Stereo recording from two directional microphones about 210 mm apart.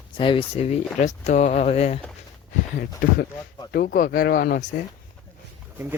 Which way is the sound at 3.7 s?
45° left (ahead or behind).